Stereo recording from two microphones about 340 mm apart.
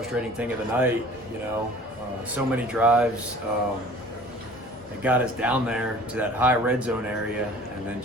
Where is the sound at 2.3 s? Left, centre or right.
Centre.